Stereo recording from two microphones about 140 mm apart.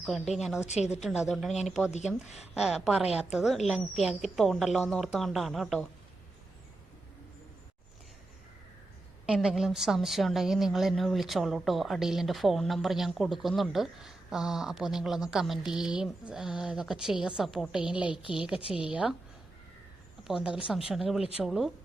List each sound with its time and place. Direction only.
0.0 s a woman's voice: centre (ahead or behind)
0.7 s a woman's voice: 55° left (ahead or behind)
1.0 s a woman's voice: 5° right (ahead or behind)
9.2 s a woman's voice: 5° right (ahead or behind)
18.1 s speech: 35° left (ahead or behind)
18.3 s a woman's voice: 5° right (ahead or behind)
20.2 s a woman's voice: 5° right (ahead or behind)